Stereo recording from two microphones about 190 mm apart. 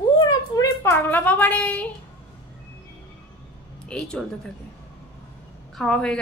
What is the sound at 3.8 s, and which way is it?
Speech, 5° left (ahead or behind).